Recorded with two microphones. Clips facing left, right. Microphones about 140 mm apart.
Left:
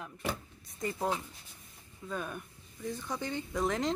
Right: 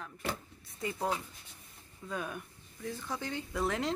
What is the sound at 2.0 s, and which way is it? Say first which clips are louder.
Speech: even; centre (ahead or behind).